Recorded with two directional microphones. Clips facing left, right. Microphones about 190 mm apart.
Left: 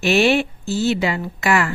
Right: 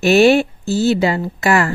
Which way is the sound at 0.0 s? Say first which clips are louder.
Right 5 dB; 40° right (ahead or behind).